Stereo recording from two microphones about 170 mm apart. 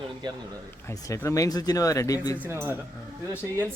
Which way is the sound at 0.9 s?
15° left (ahead or behind).